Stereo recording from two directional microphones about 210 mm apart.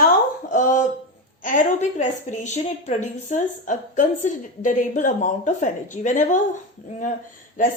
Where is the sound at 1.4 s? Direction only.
40° left (ahead or behind).